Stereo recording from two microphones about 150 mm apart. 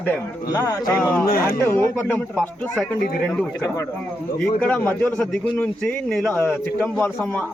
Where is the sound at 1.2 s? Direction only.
90° left.